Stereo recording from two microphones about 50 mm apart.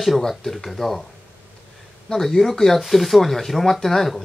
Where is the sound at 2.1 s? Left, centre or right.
Centre.